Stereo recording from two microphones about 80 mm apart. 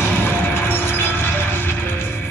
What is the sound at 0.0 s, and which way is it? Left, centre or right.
Music, left.